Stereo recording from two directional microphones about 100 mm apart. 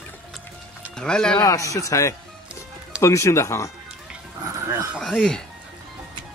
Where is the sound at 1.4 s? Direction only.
35° left (ahead or behind).